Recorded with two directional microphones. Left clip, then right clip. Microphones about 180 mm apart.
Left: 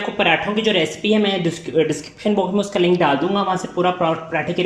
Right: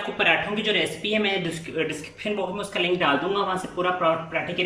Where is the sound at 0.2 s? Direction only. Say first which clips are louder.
Left 5 dB; 35° left (ahead or behind).